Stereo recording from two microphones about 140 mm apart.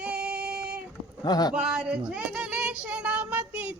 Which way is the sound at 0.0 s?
10° right (ahead or behind).